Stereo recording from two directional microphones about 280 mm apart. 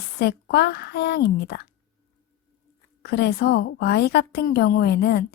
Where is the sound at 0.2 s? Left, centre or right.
Left.